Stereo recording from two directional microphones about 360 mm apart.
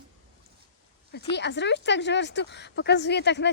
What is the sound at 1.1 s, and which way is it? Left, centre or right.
Speech, left.